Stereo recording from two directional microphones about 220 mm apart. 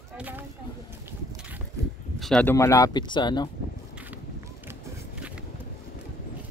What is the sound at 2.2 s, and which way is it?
Speech, 5° left (ahead or behind).